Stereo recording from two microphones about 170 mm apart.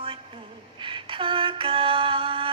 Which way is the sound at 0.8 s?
30° right (ahead or behind).